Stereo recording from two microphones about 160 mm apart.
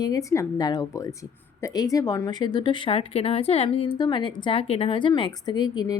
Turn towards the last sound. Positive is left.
turn(degrees=25)  # may be behind; listen again after turning